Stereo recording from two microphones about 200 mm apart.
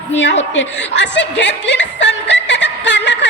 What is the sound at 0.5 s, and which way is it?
Music, 65° left (ahead or behind).